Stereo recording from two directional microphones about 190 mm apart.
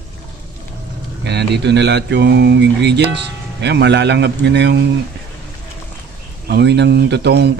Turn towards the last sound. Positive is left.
turn(degrees=-60)  # may be behind; listen again after turning